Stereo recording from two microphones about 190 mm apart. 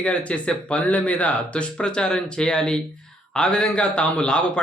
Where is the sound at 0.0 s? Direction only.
5° left (ahead or behind).